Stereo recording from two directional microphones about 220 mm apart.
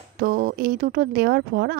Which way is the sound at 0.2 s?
45° right (ahead or behind).